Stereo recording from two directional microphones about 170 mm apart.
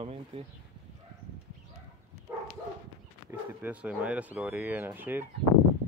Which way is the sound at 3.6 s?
5° right (ahead or behind).